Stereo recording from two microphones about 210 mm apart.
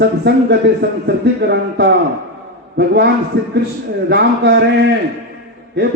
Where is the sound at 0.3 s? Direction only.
55° right (ahead or behind).